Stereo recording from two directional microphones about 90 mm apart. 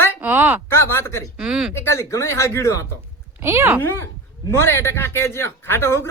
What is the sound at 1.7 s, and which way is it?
Speech, 30° left (ahead or behind).